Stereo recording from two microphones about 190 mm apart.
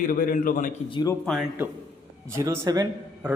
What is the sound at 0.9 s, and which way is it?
Speech, 20° left (ahead or behind).